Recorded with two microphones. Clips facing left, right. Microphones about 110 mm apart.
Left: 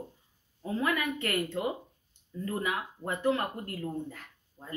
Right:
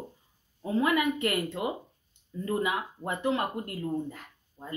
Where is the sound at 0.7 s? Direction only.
15° right (ahead or behind).